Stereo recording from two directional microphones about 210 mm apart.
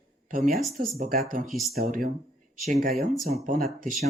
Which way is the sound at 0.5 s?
Centre (ahead or behind).